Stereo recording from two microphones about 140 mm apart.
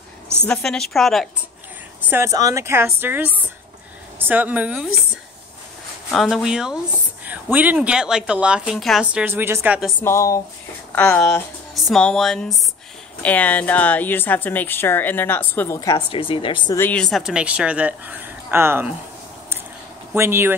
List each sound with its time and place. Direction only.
0.5 s speech: 5° left (ahead or behind)
2.0 s speech: 15° right (ahead or behind)
6.1 s speech: centre (ahead or behind)
9.9 s a woman's voice: 20° left (ahead or behind)
11.7 s a woman's voice: 5° left (ahead or behind)
15.9 s speech: 40° left (ahead or behind)
16.7 s a woman's voice: 15° left (ahead or behind)
17.0 s speech: centre (ahead or behind)
20.2 s speech: 15° right (ahead or behind)